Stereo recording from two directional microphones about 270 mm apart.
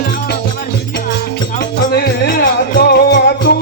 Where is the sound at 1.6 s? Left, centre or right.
Left.